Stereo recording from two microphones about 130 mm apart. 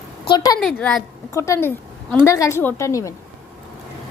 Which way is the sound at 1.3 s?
20° left (ahead or behind).